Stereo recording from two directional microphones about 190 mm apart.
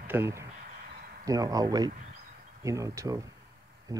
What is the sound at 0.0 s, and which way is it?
Speech, 10° right (ahead or behind).